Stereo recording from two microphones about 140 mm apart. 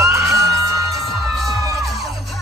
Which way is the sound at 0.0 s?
25° right (ahead or behind).